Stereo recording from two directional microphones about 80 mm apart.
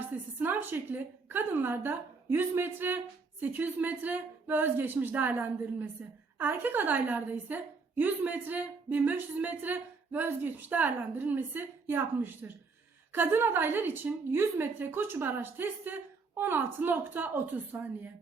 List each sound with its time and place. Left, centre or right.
0.0 s a woman's voice: right